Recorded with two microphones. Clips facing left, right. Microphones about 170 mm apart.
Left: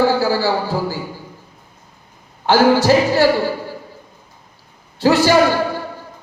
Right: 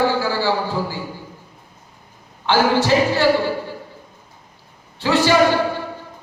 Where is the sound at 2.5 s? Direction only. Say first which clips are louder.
Left 4 dB; 40° left (ahead or behind).